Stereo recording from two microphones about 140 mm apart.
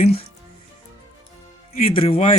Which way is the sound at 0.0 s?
45° left (ahead or behind).